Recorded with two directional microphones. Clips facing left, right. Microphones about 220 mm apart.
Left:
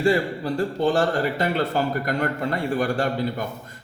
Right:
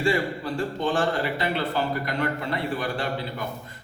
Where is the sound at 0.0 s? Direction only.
40° left (ahead or behind).